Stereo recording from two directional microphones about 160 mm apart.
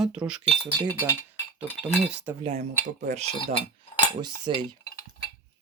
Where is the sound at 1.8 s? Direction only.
10° right (ahead or behind).